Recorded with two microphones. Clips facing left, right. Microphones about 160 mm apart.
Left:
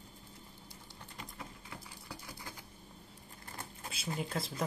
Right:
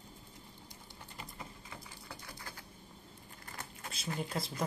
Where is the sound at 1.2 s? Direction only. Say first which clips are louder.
Left 1 dB; centre (ahead or behind).